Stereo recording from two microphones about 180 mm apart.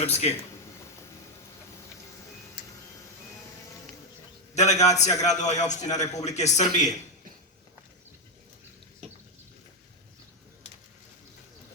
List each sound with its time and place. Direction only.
0.0 s a man's voice: 35° left (ahead or behind)
4.5 s a man's voice: 40° left (ahead or behind)